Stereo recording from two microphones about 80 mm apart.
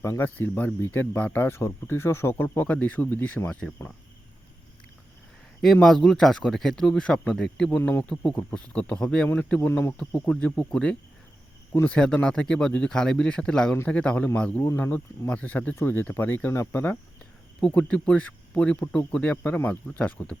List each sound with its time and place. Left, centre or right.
0.0 s speech: left
5.6 s a man's voice: centre
7.8 s speech: left
8.0 s a man's voice: centre; by 9.9 s left
10.0 s a man's voice: centre
17.6 s a man's voice: centre